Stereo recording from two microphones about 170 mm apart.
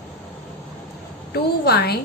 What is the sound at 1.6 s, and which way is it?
Speech, 70° left (ahead or behind).